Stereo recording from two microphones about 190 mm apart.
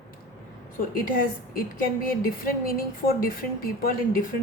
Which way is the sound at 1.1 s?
50° left (ahead or behind).